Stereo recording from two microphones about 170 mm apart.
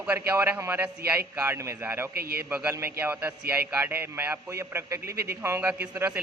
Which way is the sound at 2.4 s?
10° right (ahead or behind).